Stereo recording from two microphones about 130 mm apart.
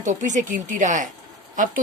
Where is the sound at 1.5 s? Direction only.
90° right.